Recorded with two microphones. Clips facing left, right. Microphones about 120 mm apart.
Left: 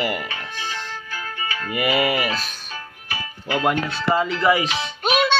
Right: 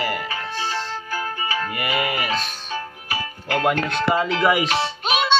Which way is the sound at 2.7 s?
35° right (ahead or behind).